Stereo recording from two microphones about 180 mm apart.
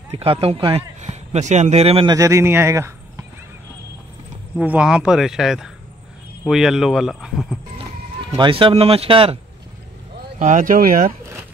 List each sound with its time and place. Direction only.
0.2 s speech: 30° right (ahead or behind)
2.1 s speech: 15° right (ahead or behind)
4.6 s speech: 5° right (ahead or behind)
8.4 s speech: 30° right (ahead or behind)
10.4 s speech: 45° right (ahead or behind)